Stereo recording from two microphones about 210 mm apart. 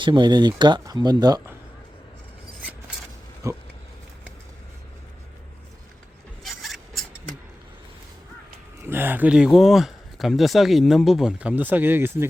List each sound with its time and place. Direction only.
0.0 s speech: 20° right (ahead or behind)
3.4 s a sound: 15° right (ahead or behind)
6.4 s filing: centre (ahead or behind)
8.8 s speech: 10° right (ahead or behind)